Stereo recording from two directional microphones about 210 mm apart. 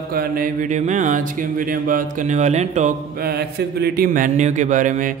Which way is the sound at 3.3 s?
50° right (ahead or behind).